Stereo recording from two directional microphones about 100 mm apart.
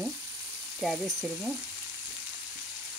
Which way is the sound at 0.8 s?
Centre (ahead or behind).